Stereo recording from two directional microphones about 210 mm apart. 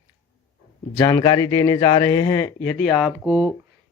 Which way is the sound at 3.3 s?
20° right (ahead or behind).